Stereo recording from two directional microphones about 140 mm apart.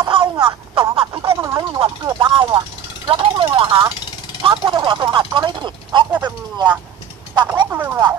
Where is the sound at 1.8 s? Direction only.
35° right (ahead or behind).